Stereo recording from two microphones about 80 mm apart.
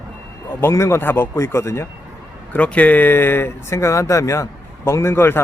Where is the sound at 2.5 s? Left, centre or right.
Centre.